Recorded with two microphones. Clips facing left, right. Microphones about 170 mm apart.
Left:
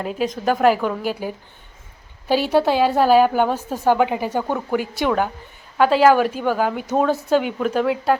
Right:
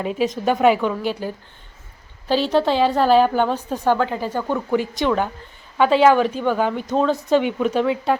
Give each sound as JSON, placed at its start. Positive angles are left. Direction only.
{"t": 0.0, "sound": "a woman's voice", "side_deg": 0}